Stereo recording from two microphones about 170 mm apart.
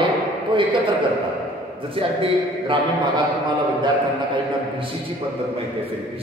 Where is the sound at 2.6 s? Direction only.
30° right (ahead or behind).